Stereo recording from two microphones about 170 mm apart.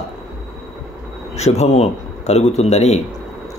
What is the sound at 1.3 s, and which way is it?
Speech, 40° left (ahead or behind).